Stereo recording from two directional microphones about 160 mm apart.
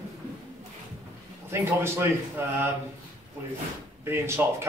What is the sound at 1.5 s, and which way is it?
Speech, 15° right (ahead or behind).